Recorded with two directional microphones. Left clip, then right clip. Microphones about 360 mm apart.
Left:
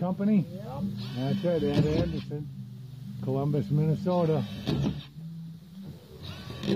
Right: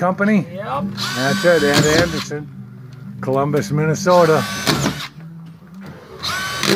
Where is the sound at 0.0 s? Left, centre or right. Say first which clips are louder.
Right 13 dB; centre.